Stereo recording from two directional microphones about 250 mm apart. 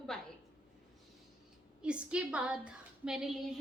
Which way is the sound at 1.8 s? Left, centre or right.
Centre.